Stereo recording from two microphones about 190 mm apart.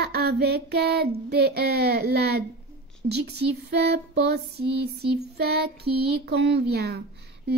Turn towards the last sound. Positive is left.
turn(degrees=-60)  # may be behind; listen again after turning